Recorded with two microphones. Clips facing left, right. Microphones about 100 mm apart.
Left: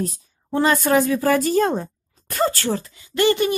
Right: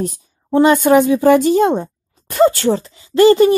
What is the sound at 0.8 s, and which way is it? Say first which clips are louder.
Speech: right 7 dB; 25° right (ahead or behind).